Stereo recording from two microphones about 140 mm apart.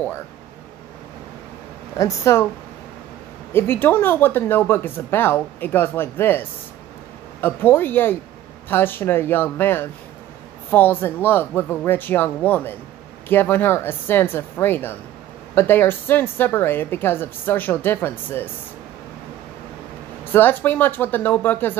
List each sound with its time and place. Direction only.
2.0 s speech: 20° left (ahead or behind)
3.5 s a woman's voice: 15° left (ahead or behind)
7.4 s a woman's voice: 15° left (ahead or behind)
20.3 s a woman's voice: 15° left (ahead or behind)